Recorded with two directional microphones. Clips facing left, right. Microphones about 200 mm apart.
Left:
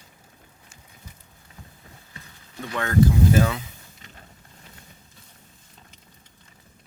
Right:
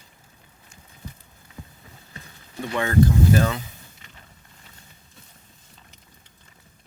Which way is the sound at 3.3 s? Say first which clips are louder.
Left 1 dB; 5° left (ahead or behind).